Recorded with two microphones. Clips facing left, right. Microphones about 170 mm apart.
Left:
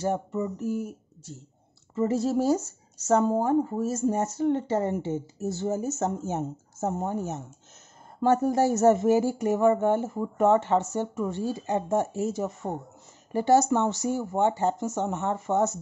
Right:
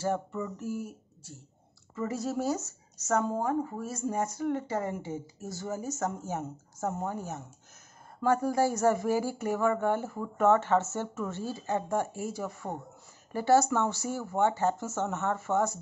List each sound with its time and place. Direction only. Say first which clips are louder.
0.0 s speech: left 4 dB; 20° left (ahead or behind)